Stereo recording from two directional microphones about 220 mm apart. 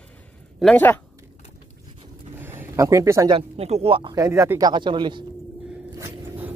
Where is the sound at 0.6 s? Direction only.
5° left (ahead or behind).